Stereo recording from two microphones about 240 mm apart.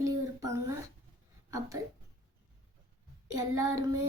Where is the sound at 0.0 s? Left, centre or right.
Centre.